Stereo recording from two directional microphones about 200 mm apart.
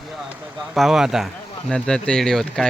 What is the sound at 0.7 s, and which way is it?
Speech, centre (ahead or behind).